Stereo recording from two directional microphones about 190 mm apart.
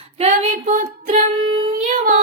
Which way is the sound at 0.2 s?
30° right (ahead or behind).